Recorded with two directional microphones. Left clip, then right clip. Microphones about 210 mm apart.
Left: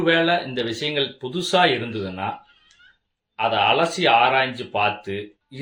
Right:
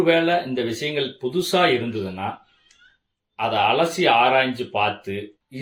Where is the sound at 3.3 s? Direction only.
15° left (ahead or behind).